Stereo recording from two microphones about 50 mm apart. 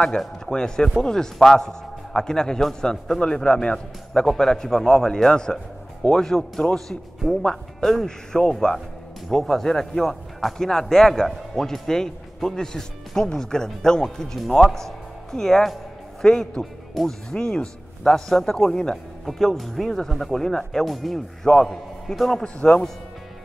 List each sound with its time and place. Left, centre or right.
0.5 s a man's voice: centre
16.3 s speech: centre
19.2 s a man's voice: centre